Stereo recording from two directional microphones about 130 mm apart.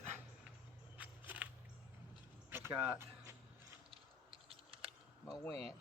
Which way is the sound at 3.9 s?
45° right (ahead or behind).